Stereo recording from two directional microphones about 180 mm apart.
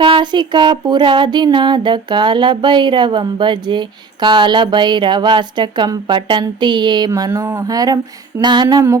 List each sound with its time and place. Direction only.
0.0 s female singing: 25° right (ahead or behind)